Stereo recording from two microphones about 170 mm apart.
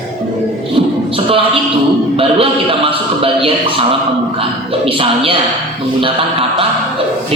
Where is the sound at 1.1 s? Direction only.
35° right (ahead or behind).